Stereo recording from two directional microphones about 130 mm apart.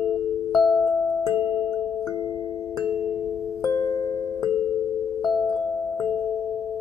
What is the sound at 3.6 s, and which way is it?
Music, 25° left (ahead or behind).